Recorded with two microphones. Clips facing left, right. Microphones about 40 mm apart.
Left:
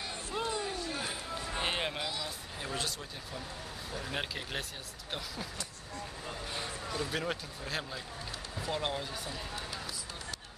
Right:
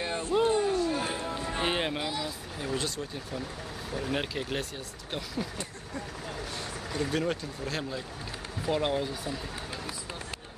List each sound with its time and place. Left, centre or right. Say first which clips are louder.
0.0 s a sound: right 10 dB; right
0.7 s music: right 9 dB; centre
2.6 s speech: right 5 dB; centre
4.1 s speech: right 5 dB; centre
7.1 s speech: right 5 dB; centre
8.6 s speech: right 7 dB; centre